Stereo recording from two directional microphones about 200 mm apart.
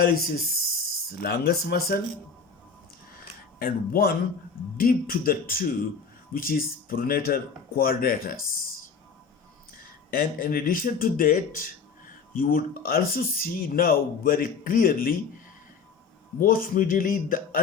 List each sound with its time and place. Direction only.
0.0 s speech: 45° left (ahead or behind)
3.6 s speech: 50° left (ahead or behind)
9.7 s speech: 45° left (ahead or behind)
16.4 s speech: 45° left (ahead or behind)